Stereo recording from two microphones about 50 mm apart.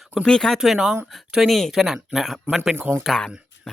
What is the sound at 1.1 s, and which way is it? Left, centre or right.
Speech, centre.